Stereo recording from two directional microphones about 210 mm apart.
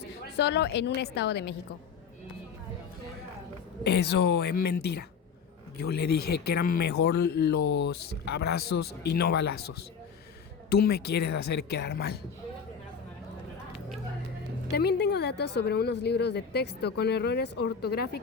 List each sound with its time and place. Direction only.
0.3 s speech: 55° left (ahead or behind)
3.8 s speech: 50° left (ahead or behind)
10.7 s speech: 50° left (ahead or behind)
14.7 s speech: 50° left (ahead or behind)